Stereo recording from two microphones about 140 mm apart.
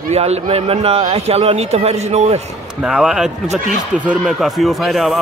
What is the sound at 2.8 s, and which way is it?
Speech, 5° right (ahead or behind).